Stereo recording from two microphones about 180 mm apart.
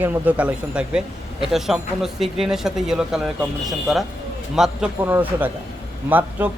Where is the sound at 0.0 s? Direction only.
10° right (ahead or behind).